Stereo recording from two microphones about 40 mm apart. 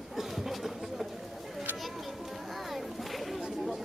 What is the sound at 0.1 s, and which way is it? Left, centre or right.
Chatter, centre.